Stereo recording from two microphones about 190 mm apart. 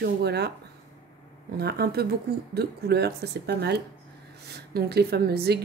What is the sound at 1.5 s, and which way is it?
A woman's voice, 55° right (ahead or behind).